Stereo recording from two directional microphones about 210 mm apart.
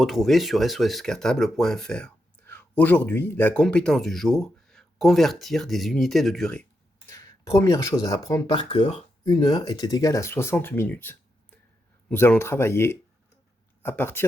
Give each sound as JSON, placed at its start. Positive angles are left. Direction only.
{"t": 0.0, "sound": "speech", "side_deg": 0}
{"t": 7.1, "sound": "speech", "side_deg": 15}